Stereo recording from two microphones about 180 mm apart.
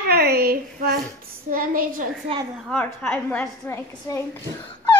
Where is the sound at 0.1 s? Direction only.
60° right (ahead or behind).